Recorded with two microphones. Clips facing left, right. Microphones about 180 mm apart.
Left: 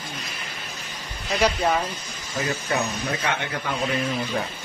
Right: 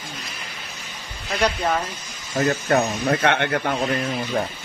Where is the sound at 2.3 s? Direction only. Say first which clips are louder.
Right 6 dB; 50° right (ahead or behind).